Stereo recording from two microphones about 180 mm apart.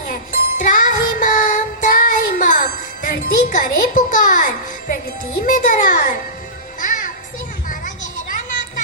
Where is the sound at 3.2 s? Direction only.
45° left (ahead or behind).